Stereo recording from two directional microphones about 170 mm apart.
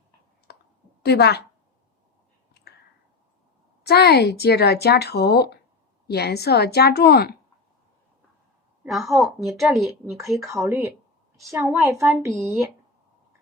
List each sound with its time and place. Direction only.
0.5 s clicking: 65° left (ahead or behind)
1.0 s speech: 75° left (ahead or behind)
3.8 s speech: 70° left (ahead or behind)
8.8 s a woman's voice: centre (ahead or behind)
10.6 s a woman's voice: 15° right (ahead or behind)
12.3 s a woman's voice: centre (ahead or behind)